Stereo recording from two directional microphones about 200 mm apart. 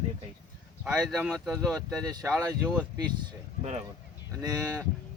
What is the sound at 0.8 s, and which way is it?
Speech, centre (ahead or behind).